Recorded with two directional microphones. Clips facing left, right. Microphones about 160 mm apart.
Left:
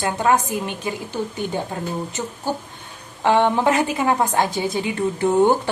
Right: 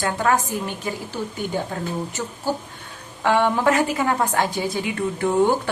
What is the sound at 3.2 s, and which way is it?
A woman's voice, 20° left (ahead or behind).